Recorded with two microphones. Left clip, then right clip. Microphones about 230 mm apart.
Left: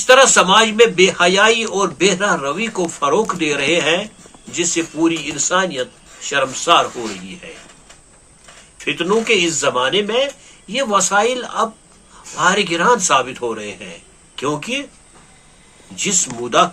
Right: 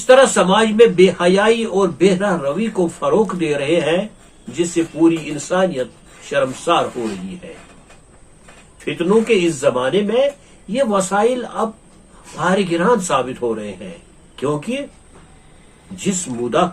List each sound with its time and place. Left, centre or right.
0.0 s speech: centre
8.8 s speech: centre
16.0 s speech: centre